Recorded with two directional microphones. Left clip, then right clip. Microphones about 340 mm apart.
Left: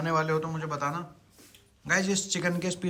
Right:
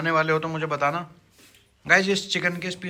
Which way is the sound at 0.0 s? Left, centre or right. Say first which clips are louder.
Right 5 dB; centre.